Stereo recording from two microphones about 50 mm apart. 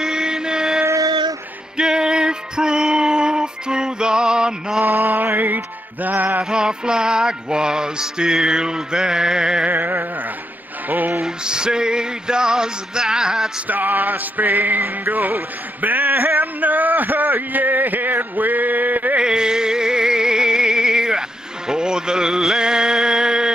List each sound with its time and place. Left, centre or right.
0.0 s chant: centre
1.8 s music: centre
4.8 s mantra: right
6.0 s music: right
6.5 s music: centre
9.7 s music: right
11.2 s music: centre
13.7 s music: right
19.1 s music: centre